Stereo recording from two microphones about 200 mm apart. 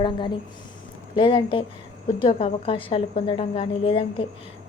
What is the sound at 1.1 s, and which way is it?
A woman's voice, 25° left (ahead or behind).